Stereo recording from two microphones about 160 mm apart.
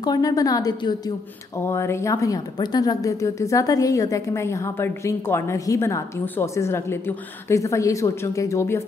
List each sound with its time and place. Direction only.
0.0 s a woman's voice: 25° left (ahead or behind)